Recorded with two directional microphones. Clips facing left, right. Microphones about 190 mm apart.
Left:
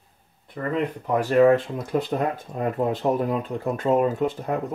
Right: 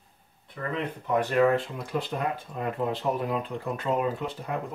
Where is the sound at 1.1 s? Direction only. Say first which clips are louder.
Left 5 dB; 40° left (ahead or behind).